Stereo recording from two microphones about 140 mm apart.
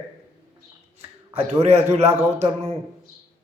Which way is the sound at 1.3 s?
45° right (ahead or behind).